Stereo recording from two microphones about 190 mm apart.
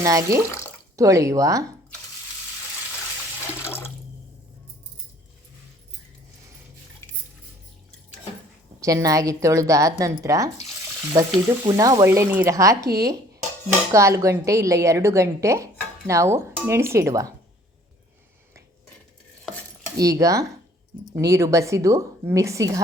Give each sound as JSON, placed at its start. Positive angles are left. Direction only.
{"t": 0.0, "sound": "a woman's voice", "side_deg": -15}
{"t": 3.6, "sound": "water", "side_deg": 15}
{"t": 8.8, "sound": "a woman's voice", "side_deg": -15}
{"t": 11.1, "sound": "frying", "side_deg": -20}
{"t": 11.7, "sound": "a woman's voice", "side_deg": -20}
{"t": 20.0, "sound": "a woman's voice", "side_deg": -15}